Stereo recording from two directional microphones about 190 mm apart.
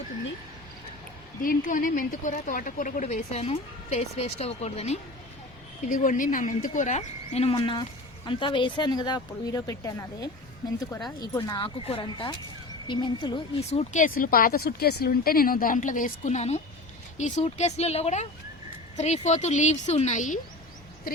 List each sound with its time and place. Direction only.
1.4 s speech: 45° left (ahead or behind)
14.2 s a woman's voice: 50° left (ahead or behind)